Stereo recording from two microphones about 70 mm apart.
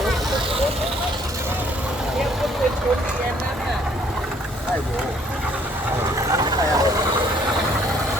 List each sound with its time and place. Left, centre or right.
6.3 s vehicle: right